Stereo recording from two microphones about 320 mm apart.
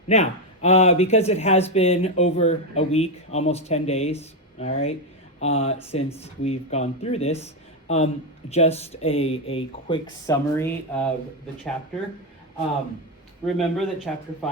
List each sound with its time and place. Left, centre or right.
0.1 s speech: left
13.4 s speech: centre